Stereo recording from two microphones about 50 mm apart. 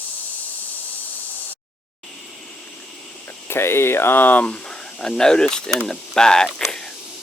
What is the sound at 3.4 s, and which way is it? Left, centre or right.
Speech, left.